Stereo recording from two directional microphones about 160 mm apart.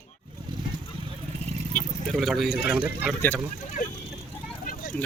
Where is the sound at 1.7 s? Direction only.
Centre (ahead or behind).